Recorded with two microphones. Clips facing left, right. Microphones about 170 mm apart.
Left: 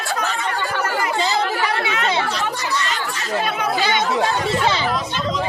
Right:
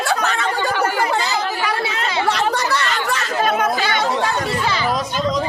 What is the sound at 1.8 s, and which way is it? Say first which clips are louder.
Speech: left 1 dB; 35° right (ahead or behind).